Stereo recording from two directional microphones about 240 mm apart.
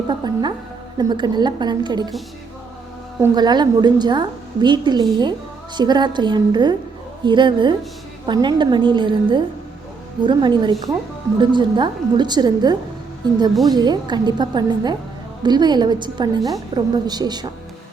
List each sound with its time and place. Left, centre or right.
0.1 s a woman's voice: centre
3.2 s a woman's voice: centre